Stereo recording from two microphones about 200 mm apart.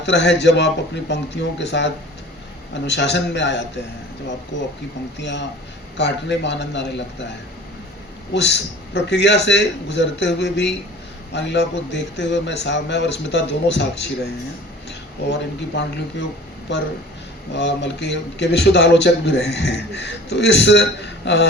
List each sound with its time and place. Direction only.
0.0 s speech: 60° left (ahead or behind)
17.5 s speech: 60° left (ahead or behind)